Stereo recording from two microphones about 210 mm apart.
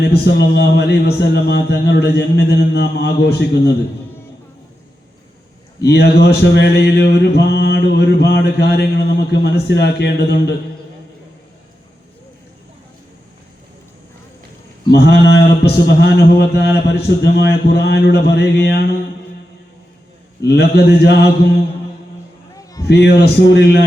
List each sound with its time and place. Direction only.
0.0 s mantra: 55° left (ahead or behind)
5.8 s mantra: 50° left (ahead or behind)
14.8 s mantra: 50° left (ahead or behind)
20.4 s mantra: 50° left (ahead or behind)
22.5 s a sound: 15° left (ahead or behind)
22.9 s mantra: 50° left (ahead or behind)